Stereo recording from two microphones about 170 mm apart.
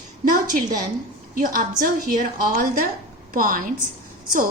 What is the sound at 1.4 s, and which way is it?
Speech, 55° right (ahead or behind).